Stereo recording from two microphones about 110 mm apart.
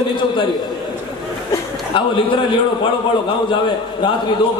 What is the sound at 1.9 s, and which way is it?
Speech, 50° left (ahead or behind).